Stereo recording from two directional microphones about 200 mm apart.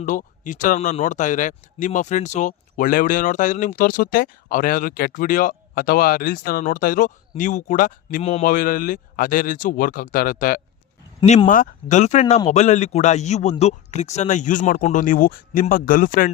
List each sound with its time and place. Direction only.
0.0 s a man's voice: 40° left (ahead or behind)